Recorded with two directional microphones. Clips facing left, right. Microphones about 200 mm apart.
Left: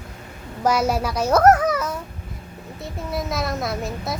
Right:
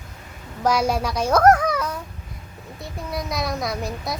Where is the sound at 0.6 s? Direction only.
5° left (ahead or behind).